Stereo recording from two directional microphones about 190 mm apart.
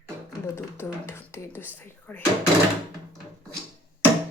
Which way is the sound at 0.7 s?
15° left (ahead or behind).